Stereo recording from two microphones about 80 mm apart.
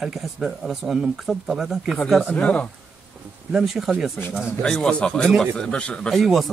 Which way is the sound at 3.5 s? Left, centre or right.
Centre.